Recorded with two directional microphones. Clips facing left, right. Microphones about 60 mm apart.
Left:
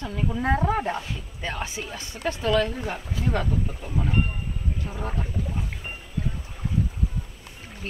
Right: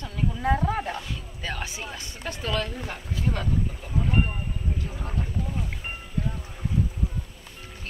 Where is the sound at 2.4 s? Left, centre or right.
Centre.